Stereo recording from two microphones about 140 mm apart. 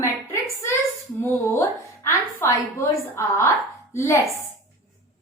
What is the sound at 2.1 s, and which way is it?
A woman's voice, 20° left (ahead or behind).